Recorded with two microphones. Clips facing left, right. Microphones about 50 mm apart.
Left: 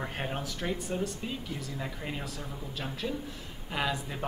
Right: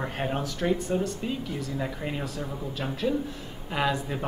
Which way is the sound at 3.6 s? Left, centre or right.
Centre.